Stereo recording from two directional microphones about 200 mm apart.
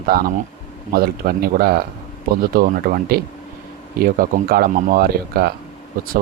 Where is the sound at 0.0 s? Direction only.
45° right (ahead or behind).